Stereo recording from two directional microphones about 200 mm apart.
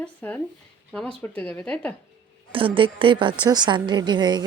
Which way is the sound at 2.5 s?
25° right (ahead or behind).